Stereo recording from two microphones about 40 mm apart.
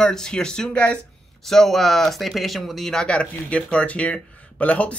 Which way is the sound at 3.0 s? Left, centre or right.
Left.